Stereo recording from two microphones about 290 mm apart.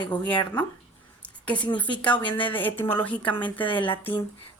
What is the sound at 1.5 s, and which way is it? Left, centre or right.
Speech, centre.